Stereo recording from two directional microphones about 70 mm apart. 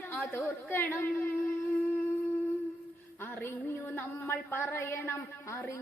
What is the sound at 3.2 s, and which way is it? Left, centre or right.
A woman's voice, left.